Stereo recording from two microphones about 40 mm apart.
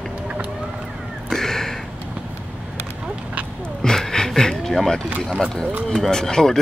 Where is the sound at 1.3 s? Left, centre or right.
Centre.